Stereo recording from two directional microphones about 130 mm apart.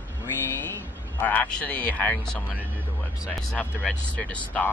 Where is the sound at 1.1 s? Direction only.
10° left (ahead or behind).